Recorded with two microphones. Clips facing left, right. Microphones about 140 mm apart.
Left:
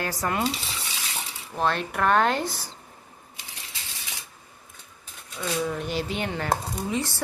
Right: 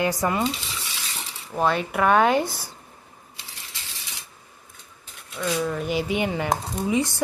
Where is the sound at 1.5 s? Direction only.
10° right (ahead or behind).